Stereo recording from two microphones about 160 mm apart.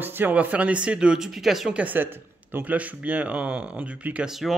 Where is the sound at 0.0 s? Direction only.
10° right (ahead or behind).